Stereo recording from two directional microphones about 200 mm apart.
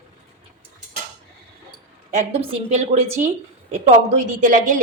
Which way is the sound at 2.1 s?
30° right (ahead or behind).